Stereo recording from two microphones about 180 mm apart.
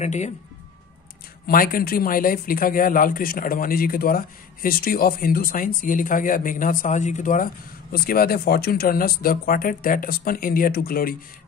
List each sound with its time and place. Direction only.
0.0 s speech: 40° left (ahead or behind)
1.5 s speech: 50° left (ahead or behind)
7.9 s speech: 55° left (ahead or behind)